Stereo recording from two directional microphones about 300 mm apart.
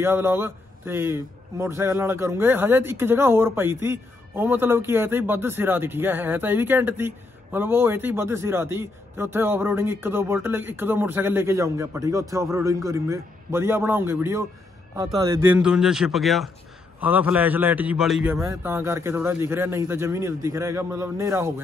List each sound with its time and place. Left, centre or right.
0.0 s a man's voice: centre